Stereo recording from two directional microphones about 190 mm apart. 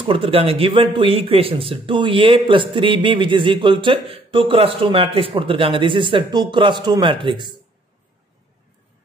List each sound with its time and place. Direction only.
0.0 s a man's voice: 30° right (ahead or behind)